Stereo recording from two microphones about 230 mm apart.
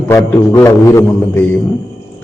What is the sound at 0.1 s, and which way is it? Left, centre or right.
A man's voice, centre.